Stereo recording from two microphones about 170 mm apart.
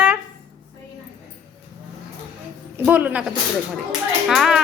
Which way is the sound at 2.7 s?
10° right (ahead or behind).